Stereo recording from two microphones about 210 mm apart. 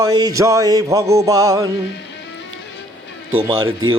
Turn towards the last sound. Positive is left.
turn(degrees=-20)  # may be behind; listen again after turning